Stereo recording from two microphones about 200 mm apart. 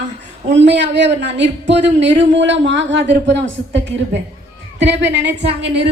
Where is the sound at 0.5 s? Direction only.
60° right (ahead or behind).